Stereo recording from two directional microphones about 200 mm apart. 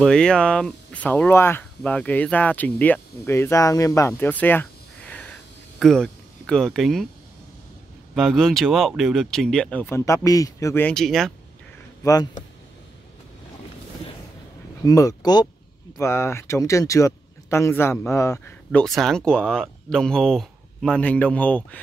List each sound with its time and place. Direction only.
0.0 s speech: 5° left (ahead or behind)
8.1 s speech: centre (ahead or behind)
12.0 s speech: 20° left (ahead or behind)
14.9 s speech: 20° left (ahead or behind)